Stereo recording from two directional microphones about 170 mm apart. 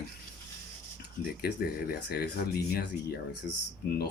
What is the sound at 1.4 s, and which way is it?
Speech, 70° left (ahead or behind).